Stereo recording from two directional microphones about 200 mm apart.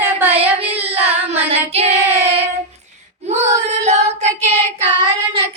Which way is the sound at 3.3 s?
35° right (ahead or behind).